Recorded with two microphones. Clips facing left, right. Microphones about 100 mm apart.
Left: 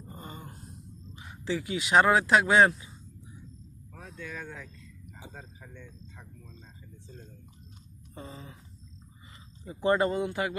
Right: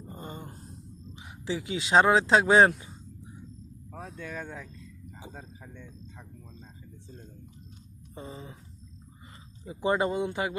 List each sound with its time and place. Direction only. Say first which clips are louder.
0.1 s wail: right 3 dB; 25° right (ahead or behind)
1.1 s speech: left 1 dB; 15° right (ahead or behind); by 2.7 s 35° right (ahead or behind)
3.9 s vehicle: right 3 dB; 35° right (ahead or behind)
5.2 s speech: right 2 dB; 15° right (ahead or behind)
8.1 s speech: right 2 dB; 25° right (ahead or behind)
9.6 s speech: left 1 dB; 15° right (ahead or behind)